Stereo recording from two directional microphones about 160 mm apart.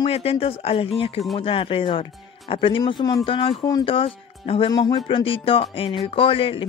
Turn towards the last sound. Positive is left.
turn(degrees=35)  # may be behind; listen again after turning